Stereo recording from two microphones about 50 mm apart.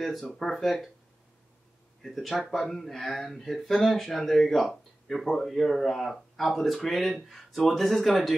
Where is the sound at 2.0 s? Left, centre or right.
Centre.